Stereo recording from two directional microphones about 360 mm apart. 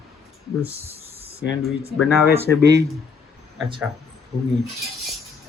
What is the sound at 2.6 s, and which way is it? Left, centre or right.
Speech, right.